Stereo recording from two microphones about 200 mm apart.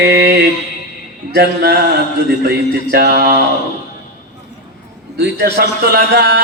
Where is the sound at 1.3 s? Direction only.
55° right (ahead or behind).